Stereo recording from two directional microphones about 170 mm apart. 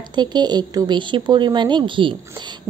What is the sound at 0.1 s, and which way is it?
A woman's voice, 25° right (ahead or behind).